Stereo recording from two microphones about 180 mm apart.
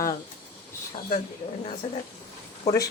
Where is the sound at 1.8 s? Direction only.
35° left (ahead or behind).